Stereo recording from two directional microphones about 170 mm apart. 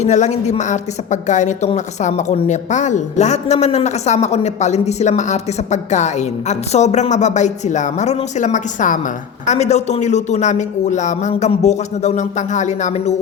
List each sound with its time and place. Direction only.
0.0 s a woman's voice: 45° left (ahead or behind)